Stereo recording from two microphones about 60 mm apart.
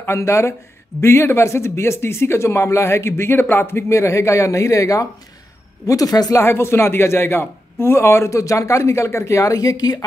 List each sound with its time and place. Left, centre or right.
0.0 s speech: left
5.9 s speech: left
6.3 s speech: left